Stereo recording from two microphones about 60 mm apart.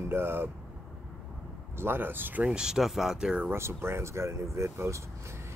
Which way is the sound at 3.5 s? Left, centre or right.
Right.